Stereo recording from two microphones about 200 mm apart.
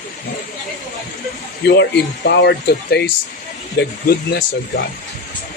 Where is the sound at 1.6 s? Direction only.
55° left (ahead or behind).